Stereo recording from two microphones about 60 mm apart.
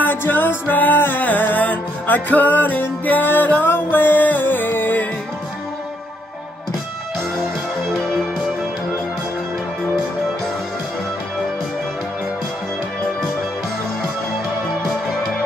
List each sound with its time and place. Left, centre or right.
0.0 s music: left
7.9 s music: centre